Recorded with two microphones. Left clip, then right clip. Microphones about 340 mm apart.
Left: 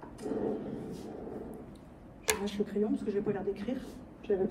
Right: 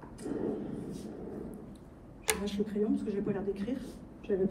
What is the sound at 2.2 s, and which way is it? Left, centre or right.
A woman's voice, centre.